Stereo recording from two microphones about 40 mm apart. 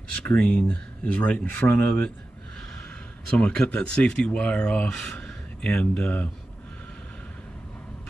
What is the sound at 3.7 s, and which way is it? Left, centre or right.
Speech, left.